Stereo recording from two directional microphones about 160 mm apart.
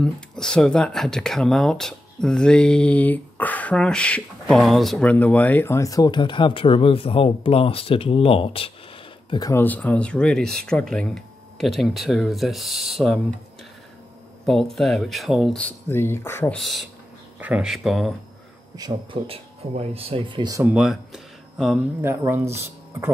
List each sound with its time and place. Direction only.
0.0 s speech: 5° left (ahead or behind); by 8.7 s 35° left (ahead or behind)
9.3 s speech: 25° left (ahead or behind)
9.6 s speech: 10° left (ahead or behind)
14.4 s speech: centre (ahead or behind)
16.5 s speech: centre (ahead or behind)
18.8 s speech: 30° right (ahead or behind)
20.6 s speech: 5° right (ahead or behind)
22.0 s speech: 15° right (ahead or behind)